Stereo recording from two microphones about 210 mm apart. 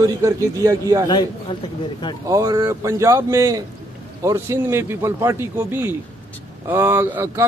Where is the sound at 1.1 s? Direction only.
20° left (ahead or behind).